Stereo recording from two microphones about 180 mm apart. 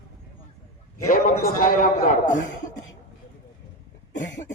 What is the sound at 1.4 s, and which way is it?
A man's voice, 50° left (ahead or behind).